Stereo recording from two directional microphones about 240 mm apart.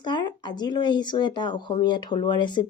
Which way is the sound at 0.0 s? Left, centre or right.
Centre.